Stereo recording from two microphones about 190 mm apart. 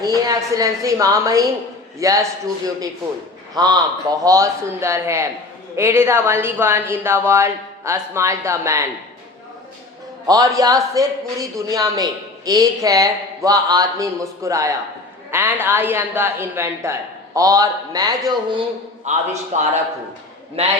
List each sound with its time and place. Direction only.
0.0 s speech: 20° right (ahead or behind)
3.5 s a man's voice: 20° right (ahead or behind)
10.2 s a man's voice: 20° right (ahead or behind)
19.0 s a man's voice: 35° right (ahead or behind)